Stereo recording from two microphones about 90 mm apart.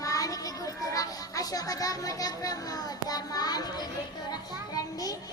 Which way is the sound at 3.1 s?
45° left (ahead or behind).